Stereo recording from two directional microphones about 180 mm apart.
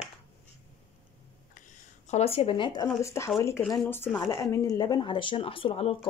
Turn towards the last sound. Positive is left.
turn(degrees=30)  # may be behind; listen again after turning